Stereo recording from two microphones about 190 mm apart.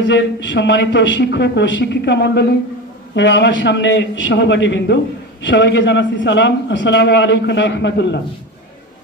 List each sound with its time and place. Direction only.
0.0 s a man's voice: 70° left (ahead or behind)